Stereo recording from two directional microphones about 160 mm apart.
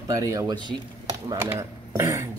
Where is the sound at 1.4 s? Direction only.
15° right (ahead or behind).